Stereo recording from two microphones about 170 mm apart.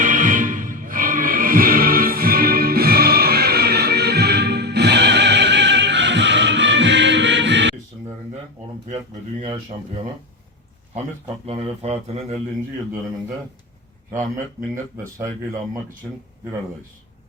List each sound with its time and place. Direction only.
0.0 s music: 50° right (ahead or behind); by 7.8 s 90° right
11.4 s speech: 35° right (ahead or behind)
14.1 s speech: 15° right (ahead or behind)